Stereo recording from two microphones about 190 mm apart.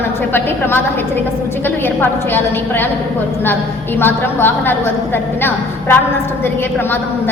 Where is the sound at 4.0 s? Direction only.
10° left (ahead or behind).